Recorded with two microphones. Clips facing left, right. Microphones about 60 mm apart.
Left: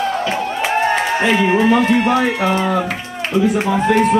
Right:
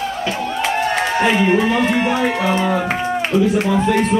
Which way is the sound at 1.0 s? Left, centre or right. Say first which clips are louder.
Even; centre.